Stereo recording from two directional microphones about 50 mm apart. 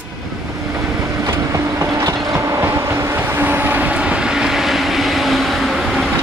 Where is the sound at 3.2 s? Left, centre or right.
Right.